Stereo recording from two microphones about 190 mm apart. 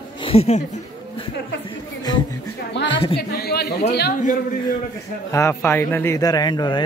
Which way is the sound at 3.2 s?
55° left (ahead or behind).